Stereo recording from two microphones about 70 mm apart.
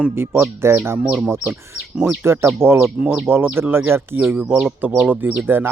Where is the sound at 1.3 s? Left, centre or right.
Right.